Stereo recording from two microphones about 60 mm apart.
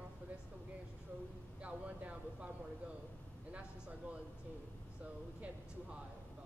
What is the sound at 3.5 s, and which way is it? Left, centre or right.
Speech, right.